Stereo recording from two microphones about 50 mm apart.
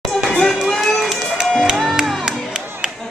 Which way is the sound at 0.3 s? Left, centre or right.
Centre.